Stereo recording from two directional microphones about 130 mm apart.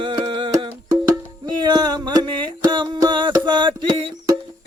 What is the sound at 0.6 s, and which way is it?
Music, 25° right (ahead or behind).